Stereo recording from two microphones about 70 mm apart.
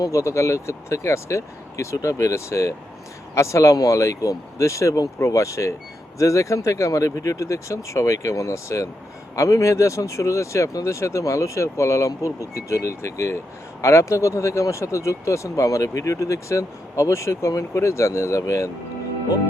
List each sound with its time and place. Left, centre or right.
0.0 s speech: left